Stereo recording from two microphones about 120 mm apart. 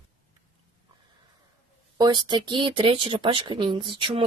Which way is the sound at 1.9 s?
35° right (ahead or behind).